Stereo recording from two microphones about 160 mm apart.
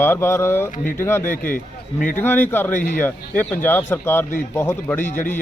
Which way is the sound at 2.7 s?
55° left (ahead or behind).